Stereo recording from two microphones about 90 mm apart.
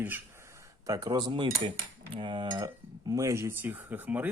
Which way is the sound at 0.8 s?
45° right (ahead or behind).